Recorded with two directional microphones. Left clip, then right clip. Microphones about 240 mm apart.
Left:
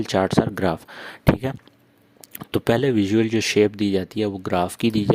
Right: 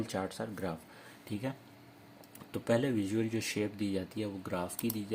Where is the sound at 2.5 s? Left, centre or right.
Left.